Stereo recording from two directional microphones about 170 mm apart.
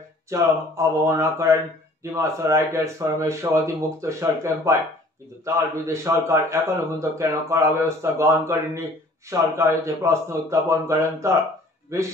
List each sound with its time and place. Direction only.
0.3 s a man's voice: 15° right (ahead or behind)